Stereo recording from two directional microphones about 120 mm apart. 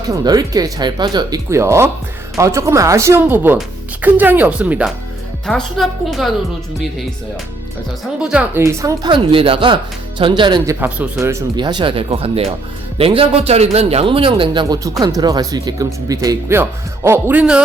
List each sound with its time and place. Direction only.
0.1 s speech: 30° right (ahead or behind)
1.5 s speech: 25° right (ahead or behind)
5.5 s a woman's voice: centre (ahead or behind)
8.0 s speech: 5° right (ahead or behind)
8.6 s speech: 25° right (ahead or behind)
9.0 s speech: 45° right (ahead or behind)
10.7 s speech: 15° right (ahead or behind)
11.2 s speech: 25° right (ahead or behind)
11.5 s speech: 40° right (ahead or behind)
14.8 s speech: 30° right (ahead or behind); by 17.6 s 10° right (ahead or behind)